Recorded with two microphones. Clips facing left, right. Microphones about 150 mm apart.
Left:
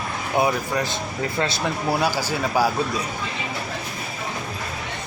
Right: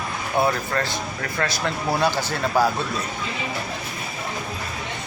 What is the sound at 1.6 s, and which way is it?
Speech, 10° left (ahead or behind).